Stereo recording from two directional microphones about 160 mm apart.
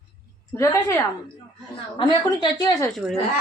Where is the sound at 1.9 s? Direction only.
30° left (ahead or behind).